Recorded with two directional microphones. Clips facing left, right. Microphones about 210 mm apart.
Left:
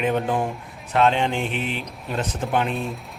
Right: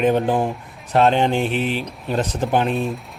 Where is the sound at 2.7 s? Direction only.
Centre (ahead or behind).